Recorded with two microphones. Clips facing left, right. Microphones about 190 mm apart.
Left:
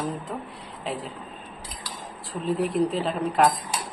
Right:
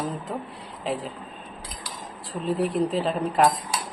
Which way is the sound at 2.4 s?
Centre (ahead or behind).